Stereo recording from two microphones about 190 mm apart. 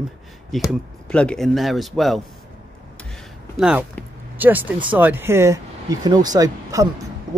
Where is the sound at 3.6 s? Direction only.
5° right (ahead or behind).